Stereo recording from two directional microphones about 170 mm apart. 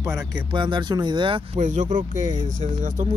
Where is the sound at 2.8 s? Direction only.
50° right (ahead or behind).